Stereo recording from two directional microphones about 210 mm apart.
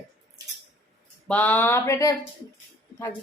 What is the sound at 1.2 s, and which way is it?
Speech, 5° left (ahead or behind).